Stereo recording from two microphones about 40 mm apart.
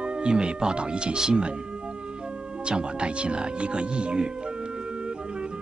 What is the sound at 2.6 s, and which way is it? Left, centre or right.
Speech, right.